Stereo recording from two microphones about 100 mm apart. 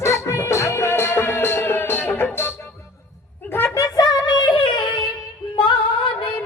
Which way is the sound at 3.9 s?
45° left (ahead or behind).